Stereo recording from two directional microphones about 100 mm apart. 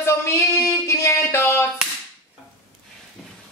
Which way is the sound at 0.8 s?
25° left (ahead or behind).